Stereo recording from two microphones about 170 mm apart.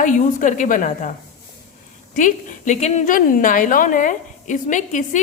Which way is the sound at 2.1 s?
45° left (ahead or behind).